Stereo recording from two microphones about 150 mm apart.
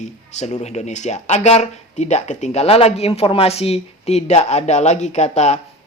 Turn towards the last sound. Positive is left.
turn(degrees=50)  # may be behind; listen again after turning